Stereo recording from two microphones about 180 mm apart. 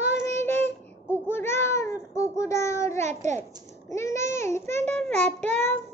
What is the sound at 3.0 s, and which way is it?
Speech, 40° right (ahead or behind).